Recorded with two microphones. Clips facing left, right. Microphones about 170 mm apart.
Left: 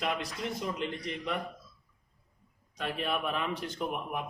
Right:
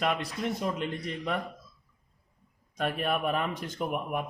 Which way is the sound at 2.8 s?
50° right (ahead or behind).